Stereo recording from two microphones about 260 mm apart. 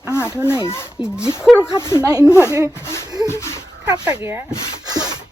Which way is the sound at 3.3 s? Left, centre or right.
Centre.